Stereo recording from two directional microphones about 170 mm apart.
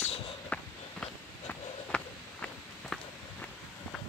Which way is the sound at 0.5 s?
10° left (ahead or behind).